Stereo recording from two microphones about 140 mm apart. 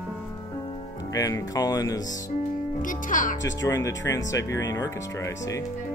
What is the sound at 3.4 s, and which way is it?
Speech, 25° left (ahead or behind).